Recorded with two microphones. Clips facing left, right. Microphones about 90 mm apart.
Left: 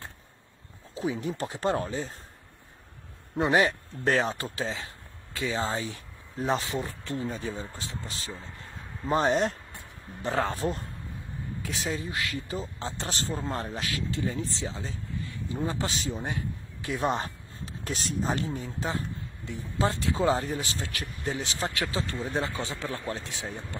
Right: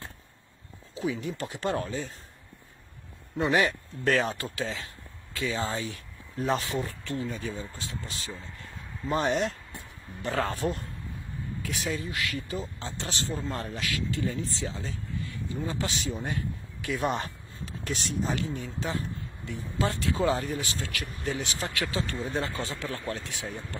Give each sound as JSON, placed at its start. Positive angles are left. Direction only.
{"t": 0.9, "sound": "speech", "side_deg": 30}
{"t": 3.3, "sound": "speech", "side_deg": 25}
{"t": 16.1, "sound": "speech", "side_deg": 20}